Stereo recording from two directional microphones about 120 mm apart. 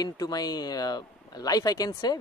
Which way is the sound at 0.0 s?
35° left (ahead or behind).